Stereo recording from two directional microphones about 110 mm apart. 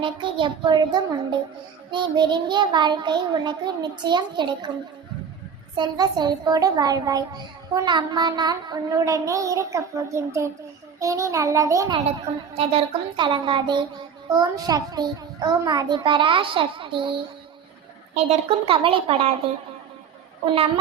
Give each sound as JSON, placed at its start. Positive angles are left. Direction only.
{"t": 0.0, "sound": "a child's voice", "side_deg": -50}
{"t": 5.7, "sound": "a woman's voice", "side_deg": -40}
{"t": 12.5, "sound": "a child's voice", "side_deg": -55}
{"t": 14.3, "sound": "a woman's voice", "side_deg": -35}
{"t": 16.0, "sound": "a child's voice", "side_deg": -50}
{"t": 18.1, "sound": "a woman's voice", "side_deg": -70}